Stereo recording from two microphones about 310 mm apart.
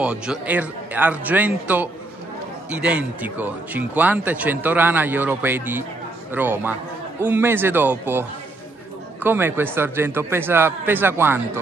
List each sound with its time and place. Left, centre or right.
0.0 s speech: centre